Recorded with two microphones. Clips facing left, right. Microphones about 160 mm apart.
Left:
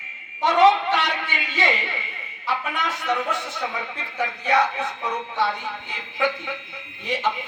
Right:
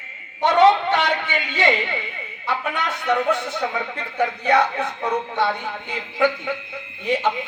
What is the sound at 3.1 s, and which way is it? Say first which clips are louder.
Speech: right 7 dB; 60° right (ahead or behind).